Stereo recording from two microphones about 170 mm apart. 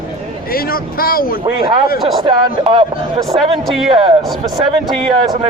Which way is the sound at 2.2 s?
30° right (ahead or behind).